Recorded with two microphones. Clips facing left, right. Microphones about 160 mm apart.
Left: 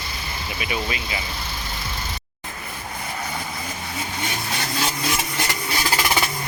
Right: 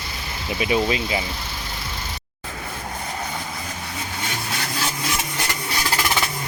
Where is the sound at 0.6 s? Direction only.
30° right (ahead or behind).